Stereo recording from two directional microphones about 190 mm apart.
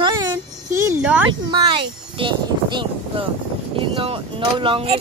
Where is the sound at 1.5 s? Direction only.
25° right (ahead or behind).